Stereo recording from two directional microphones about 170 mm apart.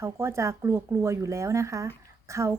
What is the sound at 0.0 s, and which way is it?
A woman's voice, 15° right (ahead or behind).